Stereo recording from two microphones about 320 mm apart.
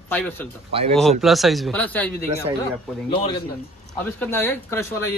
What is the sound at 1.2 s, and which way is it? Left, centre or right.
Speech, centre.